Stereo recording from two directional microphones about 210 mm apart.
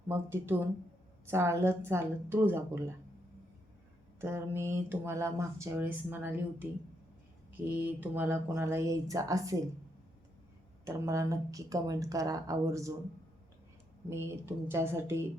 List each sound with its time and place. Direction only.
0.1 s speech: 10° right (ahead or behind)
4.2 s speech: 10° right (ahead or behind)
10.8 s speech: 15° right (ahead or behind)
14.1 s speech: 10° right (ahead or behind)